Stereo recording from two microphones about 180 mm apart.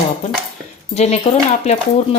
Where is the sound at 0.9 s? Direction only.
35° left (ahead or behind).